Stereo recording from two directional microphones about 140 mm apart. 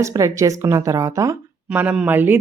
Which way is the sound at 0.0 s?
25° right (ahead or behind).